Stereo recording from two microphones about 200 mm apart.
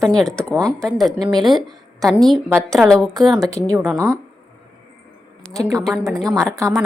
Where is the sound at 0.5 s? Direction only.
15° right (ahead or behind).